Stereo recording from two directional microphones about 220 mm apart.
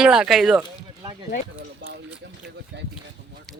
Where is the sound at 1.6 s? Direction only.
55° right (ahead or behind).